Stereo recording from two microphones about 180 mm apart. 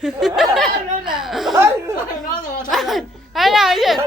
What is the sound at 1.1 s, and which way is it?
Chuckle, centre (ahead or behind).